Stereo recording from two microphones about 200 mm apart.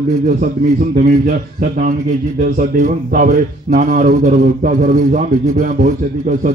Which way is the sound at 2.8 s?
40° right (ahead or behind).